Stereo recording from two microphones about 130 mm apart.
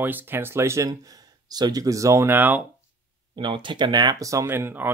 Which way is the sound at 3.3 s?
40° right (ahead or behind).